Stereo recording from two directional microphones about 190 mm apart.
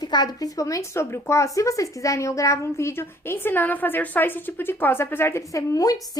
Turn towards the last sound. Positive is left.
turn(degrees=20)  # may be behind; listen again after turning